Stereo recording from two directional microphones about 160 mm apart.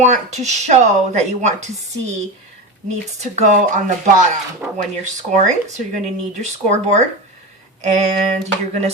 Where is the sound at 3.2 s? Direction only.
45° right (ahead or behind).